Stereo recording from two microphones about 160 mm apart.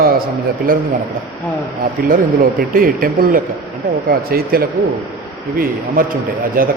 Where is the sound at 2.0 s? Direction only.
65° right (ahead or behind).